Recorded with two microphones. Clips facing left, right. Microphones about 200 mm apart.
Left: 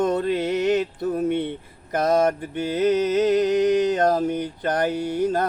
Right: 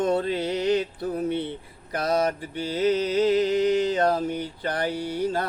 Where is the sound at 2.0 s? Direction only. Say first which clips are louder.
Left 4 dB; 45° left (ahead or behind).